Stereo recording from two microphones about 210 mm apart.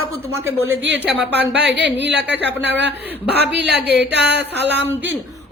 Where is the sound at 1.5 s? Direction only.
55° right (ahead or behind).